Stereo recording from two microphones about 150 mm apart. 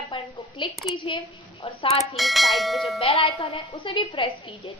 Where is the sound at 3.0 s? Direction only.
40° left (ahead or behind).